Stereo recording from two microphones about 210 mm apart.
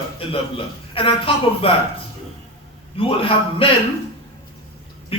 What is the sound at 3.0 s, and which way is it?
Speech, 25° left (ahead or behind).